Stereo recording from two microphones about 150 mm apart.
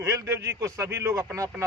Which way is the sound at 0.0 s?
20° right (ahead or behind).